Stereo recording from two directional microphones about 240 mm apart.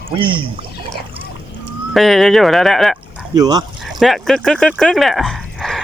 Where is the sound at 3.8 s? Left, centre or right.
Centre.